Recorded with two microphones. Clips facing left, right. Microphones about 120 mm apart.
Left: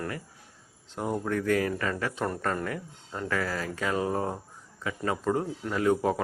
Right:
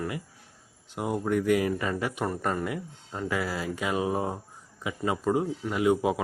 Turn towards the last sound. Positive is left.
turn(degrees=-10)  # may be behind; listen again after turning